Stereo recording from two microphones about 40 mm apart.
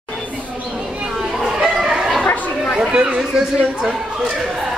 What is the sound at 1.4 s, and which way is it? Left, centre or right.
Chicken, centre.